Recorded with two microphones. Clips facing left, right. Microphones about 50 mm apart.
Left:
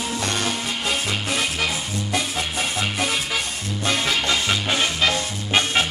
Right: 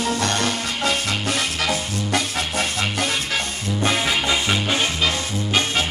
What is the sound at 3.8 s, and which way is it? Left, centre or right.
Music, centre.